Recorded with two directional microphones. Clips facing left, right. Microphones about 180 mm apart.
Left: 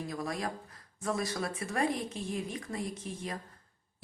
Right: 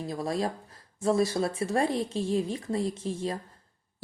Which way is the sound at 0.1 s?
30° right (ahead or behind).